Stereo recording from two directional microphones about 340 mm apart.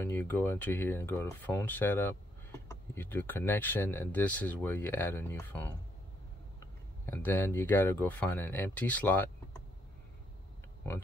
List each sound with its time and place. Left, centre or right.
0.0 s speech: centre
7.1 s speech: centre